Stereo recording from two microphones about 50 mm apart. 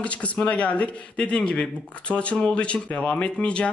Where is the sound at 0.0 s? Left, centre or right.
Left.